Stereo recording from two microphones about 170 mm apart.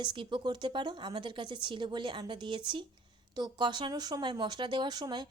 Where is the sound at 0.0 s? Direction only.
30° right (ahead or behind).